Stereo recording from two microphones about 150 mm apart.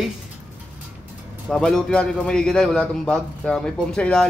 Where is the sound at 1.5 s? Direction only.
5° left (ahead or behind).